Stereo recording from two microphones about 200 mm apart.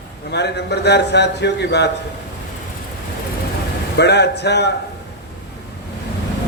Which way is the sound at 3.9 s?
55° left (ahead or behind).